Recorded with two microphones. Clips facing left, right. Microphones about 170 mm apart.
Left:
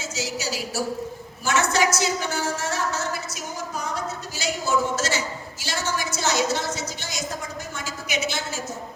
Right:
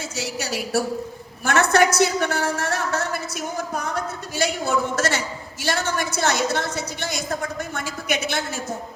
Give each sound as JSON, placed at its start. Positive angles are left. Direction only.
{"t": 0.0, "sound": "a woman's voice", "side_deg": -60}